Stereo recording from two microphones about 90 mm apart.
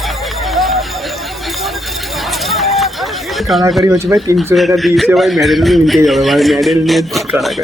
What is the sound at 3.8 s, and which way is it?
Speech, 35° right (ahead or behind).